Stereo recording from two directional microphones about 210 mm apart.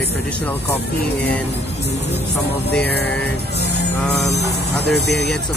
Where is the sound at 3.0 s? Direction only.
5° left (ahead or behind).